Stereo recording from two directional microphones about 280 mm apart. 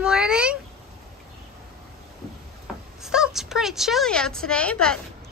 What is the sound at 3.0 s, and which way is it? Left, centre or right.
A woman's voice, centre.